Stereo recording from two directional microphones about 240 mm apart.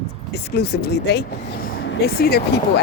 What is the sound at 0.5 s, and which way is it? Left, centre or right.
Speech, left.